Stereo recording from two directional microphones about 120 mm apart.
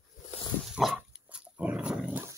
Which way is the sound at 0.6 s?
Centre (ahead or behind).